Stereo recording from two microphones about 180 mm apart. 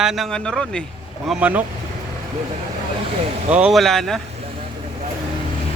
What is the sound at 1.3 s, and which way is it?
Speech, 5° right (ahead or behind).